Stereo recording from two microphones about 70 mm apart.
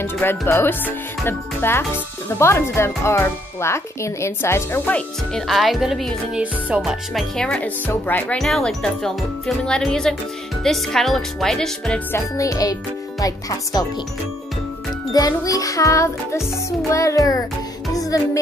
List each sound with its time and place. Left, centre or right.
0.0 s speech: left
5.3 s speech: centre
7.5 s speech: left
8.4 s speech: centre
12.2 s music: left
13.2 s speech: left
15.1 s music: left
18.1 s speech: left